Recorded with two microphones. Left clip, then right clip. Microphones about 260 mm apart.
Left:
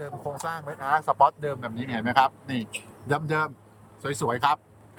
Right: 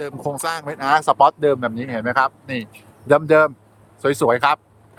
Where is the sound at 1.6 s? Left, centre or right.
Centre.